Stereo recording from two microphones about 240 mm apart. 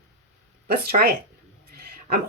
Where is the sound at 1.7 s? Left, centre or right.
Right.